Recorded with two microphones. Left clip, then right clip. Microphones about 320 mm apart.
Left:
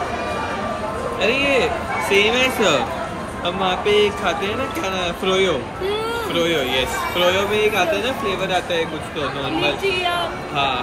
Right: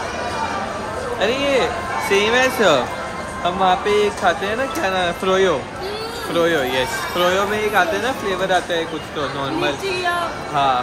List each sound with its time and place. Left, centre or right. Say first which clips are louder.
1.5 s speech: even; right
10.5 s speech: right 4 dB; right